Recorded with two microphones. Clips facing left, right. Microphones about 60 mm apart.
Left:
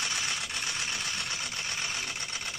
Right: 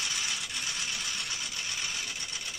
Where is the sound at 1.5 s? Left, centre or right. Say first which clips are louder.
Left 2 dB; left.